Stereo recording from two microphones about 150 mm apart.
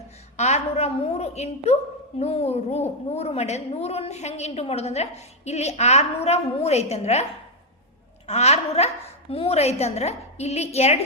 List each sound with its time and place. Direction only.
0.3 s a woman's voice: 45° left (ahead or behind)
8.3 s a woman's voice: 45° left (ahead or behind)